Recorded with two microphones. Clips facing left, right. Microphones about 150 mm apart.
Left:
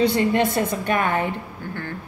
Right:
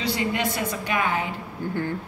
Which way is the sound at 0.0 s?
50° left (ahead or behind).